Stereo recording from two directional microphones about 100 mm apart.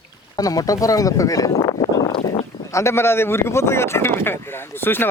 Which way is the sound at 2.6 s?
30° left (ahead or behind).